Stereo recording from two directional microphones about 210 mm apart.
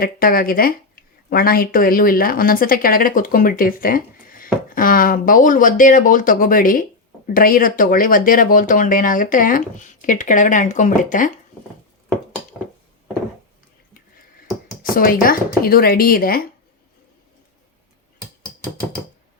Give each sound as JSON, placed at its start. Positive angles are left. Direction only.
{"t": 0.0, "sound": "speech", "side_deg": 45}
{"t": 14.8, "sound": "speech", "side_deg": 40}